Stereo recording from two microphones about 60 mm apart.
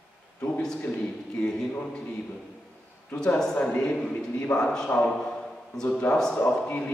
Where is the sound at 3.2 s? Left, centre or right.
Centre.